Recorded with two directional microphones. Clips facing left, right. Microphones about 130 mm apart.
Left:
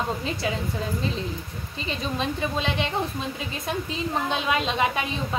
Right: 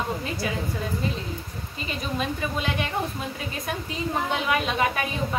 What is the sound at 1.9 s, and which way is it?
Speech, 25° left (ahead or behind).